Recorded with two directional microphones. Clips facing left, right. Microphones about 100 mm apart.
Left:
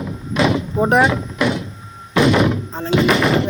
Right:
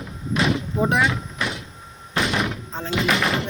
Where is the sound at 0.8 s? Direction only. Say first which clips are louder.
Left 6 dB; 45° left (ahead or behind).